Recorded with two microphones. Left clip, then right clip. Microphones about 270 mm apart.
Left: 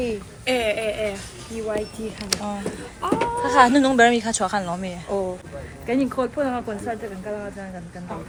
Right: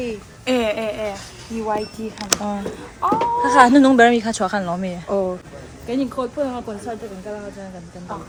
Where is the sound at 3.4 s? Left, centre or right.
Centre.